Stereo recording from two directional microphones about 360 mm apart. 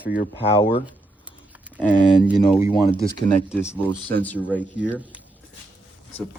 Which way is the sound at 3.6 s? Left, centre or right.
Centre.